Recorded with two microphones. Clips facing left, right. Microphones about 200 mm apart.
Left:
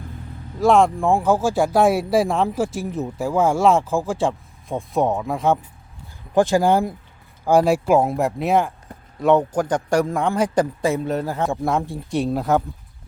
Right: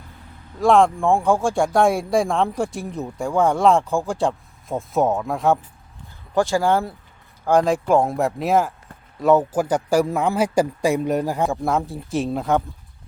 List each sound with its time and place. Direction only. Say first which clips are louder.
0.6 s speech: even; centre (ahead or behind)
6.3 s a man's voice: left 2 dB; 20° left (ahead or behind); by 11.4 s 15° right (ahead or behind)
11.4 s speech: even; centre (ahead or behind)